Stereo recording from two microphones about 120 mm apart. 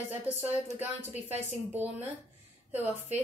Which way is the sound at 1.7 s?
15° right (ahead or behind).